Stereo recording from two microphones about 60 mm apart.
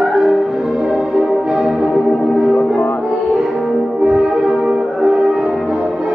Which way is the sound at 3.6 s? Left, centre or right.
Centre.